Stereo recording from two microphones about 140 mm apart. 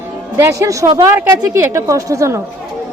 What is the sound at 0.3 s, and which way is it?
A woman's voice, 20° right (ahead or behind).